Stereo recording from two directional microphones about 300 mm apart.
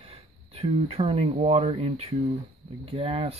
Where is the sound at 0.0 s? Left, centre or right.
Centre.